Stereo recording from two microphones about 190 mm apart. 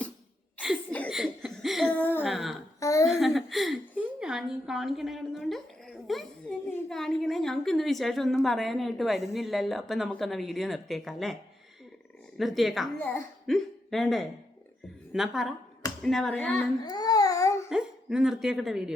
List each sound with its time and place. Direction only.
1.1 s laughter: centre (ahead or behind)
2.2 s a sound: centre (ahead or behind)
2.8 s a sound: 15° left (ahead or behind)
3.1 s a woman's voice: centre (ahead or behind)
12.4 s a woman's voice: centre (ahead or behind)
13.0 s a woman's voice: 10° left (ahead or behind)
16.8 s babbling: 20° left (ahead or behind)
17.7 s speech: 5° right (ahead or behind)